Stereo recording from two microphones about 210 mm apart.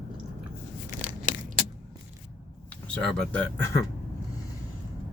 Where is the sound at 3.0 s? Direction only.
Centre (ahead or behind).